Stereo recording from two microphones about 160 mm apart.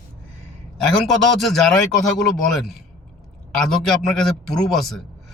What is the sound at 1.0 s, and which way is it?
Speech, centre (ahead or behind).